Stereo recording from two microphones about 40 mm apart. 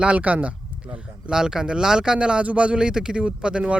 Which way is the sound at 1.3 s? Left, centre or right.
Centre.